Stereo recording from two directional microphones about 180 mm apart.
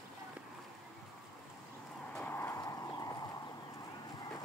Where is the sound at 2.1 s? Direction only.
10° left (ahead or behind).